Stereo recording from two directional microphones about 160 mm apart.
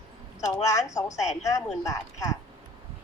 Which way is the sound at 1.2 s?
45° left (ahead or behind).